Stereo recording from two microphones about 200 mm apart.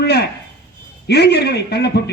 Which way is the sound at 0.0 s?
55° left (ahead or behind).